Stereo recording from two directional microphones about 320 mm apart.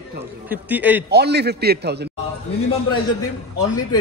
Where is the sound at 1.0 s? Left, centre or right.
Right.